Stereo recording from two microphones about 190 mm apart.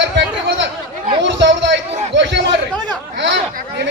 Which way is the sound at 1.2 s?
70° right (ahead or behind).